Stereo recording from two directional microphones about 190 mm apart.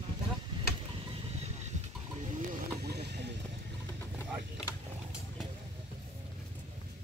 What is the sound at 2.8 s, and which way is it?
Vehicle, 60° right (ahead or behind).